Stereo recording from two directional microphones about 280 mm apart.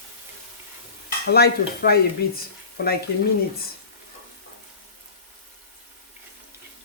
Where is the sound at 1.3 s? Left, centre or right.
Left.